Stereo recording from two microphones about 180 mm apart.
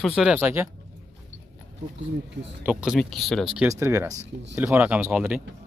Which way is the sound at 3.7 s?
15° right (ahead or behind).